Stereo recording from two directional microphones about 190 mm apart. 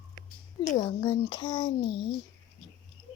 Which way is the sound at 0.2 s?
40° left (ahead or behind).